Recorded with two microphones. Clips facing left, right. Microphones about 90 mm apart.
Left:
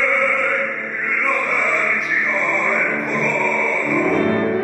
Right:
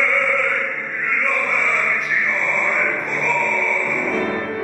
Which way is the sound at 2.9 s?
35° left (ahead or behind).